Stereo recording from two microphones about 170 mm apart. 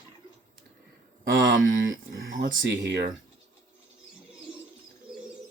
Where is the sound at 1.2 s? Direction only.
90° right.